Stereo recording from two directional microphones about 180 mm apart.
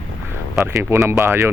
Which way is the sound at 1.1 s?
15° right (ahead or behind).